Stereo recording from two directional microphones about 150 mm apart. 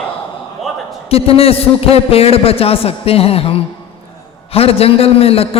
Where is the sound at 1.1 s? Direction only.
40° left (ahead or behind).